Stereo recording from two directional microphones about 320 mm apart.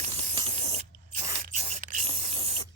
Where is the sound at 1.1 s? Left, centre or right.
Right.